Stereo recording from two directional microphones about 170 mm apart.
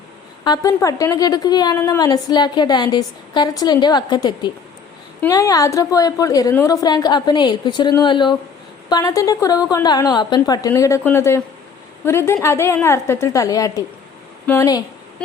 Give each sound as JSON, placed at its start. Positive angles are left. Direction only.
{"t": 0.4, "sound": "a woman's voice", "side_deg": 20}